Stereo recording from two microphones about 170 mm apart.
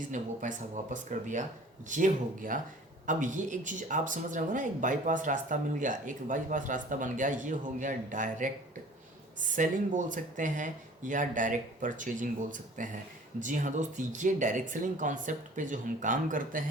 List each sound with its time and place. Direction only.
0.1 s speech: 45° right (ahead or behind)
9.6 s speech: 50° right (ahead or behind)